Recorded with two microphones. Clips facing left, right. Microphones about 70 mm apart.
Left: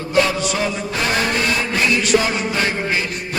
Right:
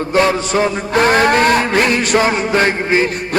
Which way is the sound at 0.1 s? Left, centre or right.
Right.